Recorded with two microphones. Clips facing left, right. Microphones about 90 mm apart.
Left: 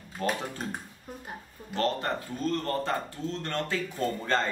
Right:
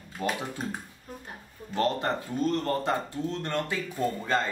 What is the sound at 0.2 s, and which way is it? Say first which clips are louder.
Speech: left 1 dB; 15° right (ahead or behind).